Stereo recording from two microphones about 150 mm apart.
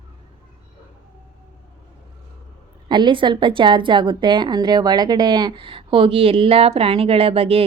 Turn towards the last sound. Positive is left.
turn(degrees=-40)  # may be behind; listen again after turning